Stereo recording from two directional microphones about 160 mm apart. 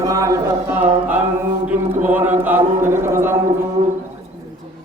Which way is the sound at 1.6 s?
10° right (ahead or behind).